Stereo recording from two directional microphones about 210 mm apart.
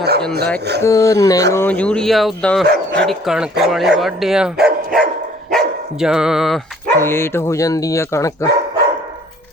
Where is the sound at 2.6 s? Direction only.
50° right (ahead or behind).